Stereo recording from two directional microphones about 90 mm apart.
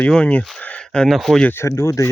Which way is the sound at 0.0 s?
10° left (ahead or behind).